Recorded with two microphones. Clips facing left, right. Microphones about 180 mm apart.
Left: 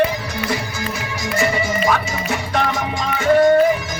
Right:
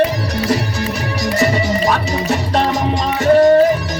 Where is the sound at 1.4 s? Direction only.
35° right (ahead or behind).